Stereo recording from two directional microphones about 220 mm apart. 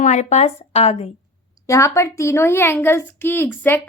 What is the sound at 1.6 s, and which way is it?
A woman's voice, 15° left (ahead or behind).